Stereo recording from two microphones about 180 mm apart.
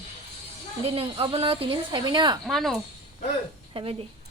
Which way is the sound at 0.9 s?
30° right (ahead or behind).